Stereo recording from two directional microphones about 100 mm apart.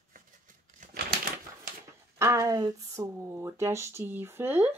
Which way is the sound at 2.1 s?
30° right (ahead or behind).